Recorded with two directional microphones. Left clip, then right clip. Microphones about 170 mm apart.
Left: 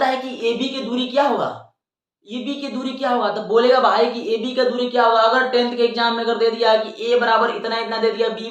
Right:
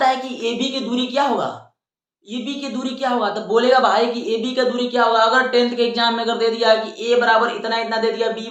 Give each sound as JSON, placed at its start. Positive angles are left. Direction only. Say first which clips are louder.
{"t": 0.0, "sound": "a woman's voice", "louder": "right 1 dB", "side_deg": -20}